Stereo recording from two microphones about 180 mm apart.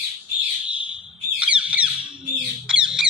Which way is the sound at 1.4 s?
5° right (ahead or behind).